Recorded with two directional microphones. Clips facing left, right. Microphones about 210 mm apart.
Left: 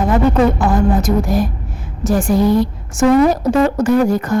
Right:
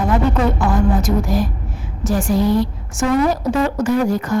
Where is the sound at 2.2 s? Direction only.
50° left (ahead or behind).